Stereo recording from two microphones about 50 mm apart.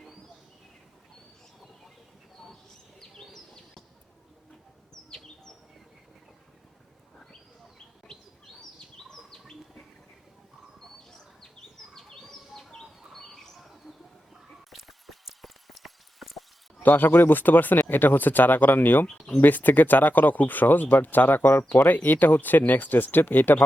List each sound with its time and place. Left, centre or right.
3.0 s bird: centre
11.9 s bird: centre
13.6 s bird: centre
14.5 s a sound: centre
16.8 s speech: left